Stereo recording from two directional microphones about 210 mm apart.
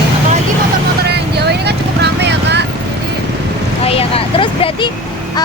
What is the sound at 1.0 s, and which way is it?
Vehicle, 50° right (ahead or behind).